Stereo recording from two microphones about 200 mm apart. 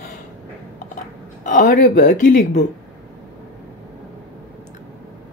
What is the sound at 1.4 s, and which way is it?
Speech, 40° left (ahead or behind).